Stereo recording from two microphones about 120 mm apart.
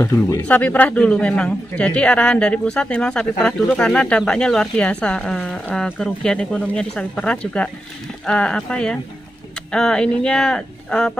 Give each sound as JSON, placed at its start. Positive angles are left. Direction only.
{"t": 0.0, "sound": "speech", "side_deg": 25}
{"t": 0.5, "sound": "speech", "side_deg": 15}